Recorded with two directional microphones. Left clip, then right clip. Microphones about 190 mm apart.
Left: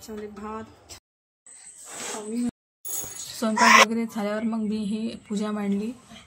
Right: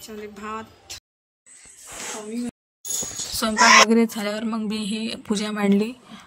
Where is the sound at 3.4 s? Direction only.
50° right (ahead or behind).